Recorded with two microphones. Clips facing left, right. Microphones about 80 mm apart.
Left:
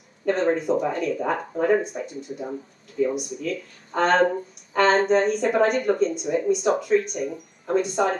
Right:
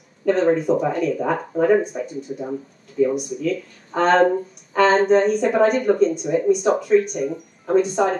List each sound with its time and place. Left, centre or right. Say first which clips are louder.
0.3 s speech: right 4 dB; centre